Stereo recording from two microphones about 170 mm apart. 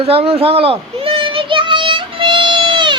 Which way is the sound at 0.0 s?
35° right (ahead or behind).